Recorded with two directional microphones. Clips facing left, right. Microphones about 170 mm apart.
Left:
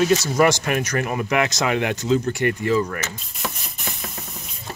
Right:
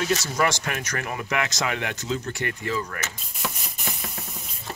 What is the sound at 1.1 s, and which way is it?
Speech, 20° left (ahead or behind).